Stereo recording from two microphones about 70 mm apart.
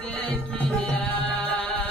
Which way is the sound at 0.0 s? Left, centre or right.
Left.